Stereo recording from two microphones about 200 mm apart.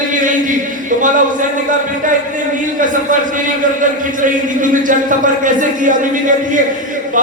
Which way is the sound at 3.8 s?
40° right (ahead or behind).